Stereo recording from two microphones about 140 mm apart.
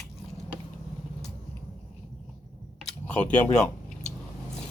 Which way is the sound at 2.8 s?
10° left (ahead or behind).